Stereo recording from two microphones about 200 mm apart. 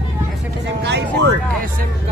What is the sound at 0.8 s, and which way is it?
Vehicle, 55° right (ahead or behind).